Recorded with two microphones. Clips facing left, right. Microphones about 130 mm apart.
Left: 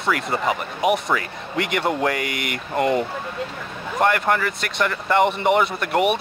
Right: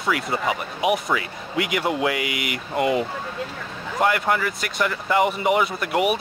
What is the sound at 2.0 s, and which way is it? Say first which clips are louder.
Speech: left 1 dB; 45° left (ahead or behind).